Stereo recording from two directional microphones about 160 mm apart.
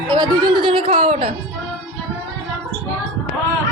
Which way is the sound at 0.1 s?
30° right (ahead or behind).